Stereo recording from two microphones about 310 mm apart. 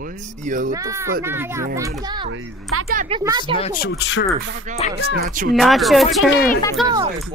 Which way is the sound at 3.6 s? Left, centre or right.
Left.